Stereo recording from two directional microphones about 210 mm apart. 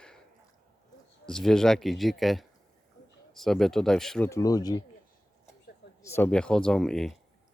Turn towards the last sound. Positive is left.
turn(degrees=0)  # may be behind; listen again after turning